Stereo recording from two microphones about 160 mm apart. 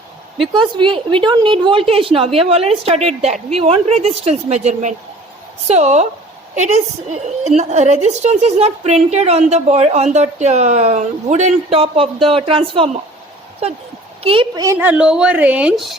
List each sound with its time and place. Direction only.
0.5 s a woman's voice: 30° right (ahead or behind)
14.3 s a woman's voice: 35° right (ahead or behind)
14.6 s a woman's voice: 15° right (ahead or behind)